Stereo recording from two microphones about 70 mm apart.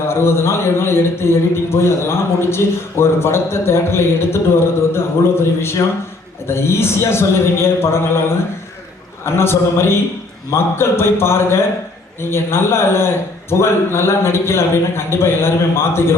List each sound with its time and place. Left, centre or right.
0.1 s a man's voice: left
6.5 s a man's voice: left
9.2 s a man's voice: left